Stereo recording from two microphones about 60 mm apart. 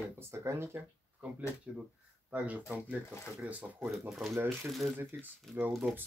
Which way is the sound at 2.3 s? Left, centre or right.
Right.